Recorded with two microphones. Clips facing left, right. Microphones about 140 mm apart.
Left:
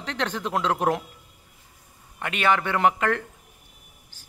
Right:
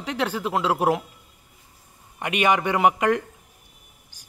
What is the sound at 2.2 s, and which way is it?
A man's voice, 15° right (ahead or behind).